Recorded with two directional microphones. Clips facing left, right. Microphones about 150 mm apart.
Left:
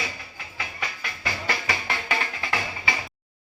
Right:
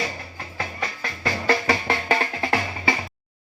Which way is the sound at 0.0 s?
45° right (ahead or behind).